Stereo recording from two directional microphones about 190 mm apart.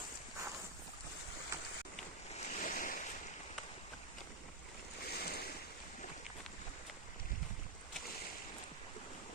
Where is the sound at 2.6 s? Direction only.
45° left (ahead or behind).